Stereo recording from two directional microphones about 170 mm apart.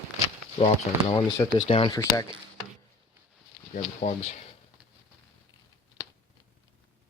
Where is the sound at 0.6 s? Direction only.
35° left (ahead or behind).